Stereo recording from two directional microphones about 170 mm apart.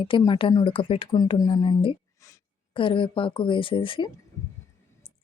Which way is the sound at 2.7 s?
30° left (ahead or behind).